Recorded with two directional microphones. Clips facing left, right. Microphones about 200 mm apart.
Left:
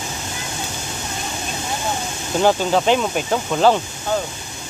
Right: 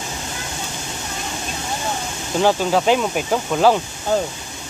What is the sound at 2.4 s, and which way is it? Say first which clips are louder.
Speech: even; 5° right (ahead or behind).